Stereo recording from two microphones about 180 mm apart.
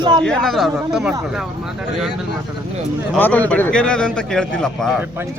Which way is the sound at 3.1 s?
10° left (ahead or behind).